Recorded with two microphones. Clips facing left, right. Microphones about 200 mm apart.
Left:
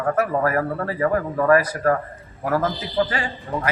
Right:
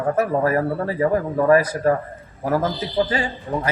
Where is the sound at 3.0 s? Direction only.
20° right (ahead or behind).